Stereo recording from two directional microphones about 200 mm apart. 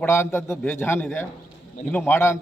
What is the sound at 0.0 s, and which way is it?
A man's voice, 10° left (ahead or behind).